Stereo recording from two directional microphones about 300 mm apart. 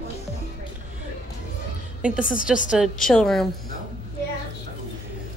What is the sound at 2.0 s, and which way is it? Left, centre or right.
A woman's voice, centre.